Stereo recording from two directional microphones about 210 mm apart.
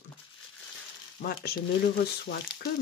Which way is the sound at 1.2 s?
50° left (ahead or behind).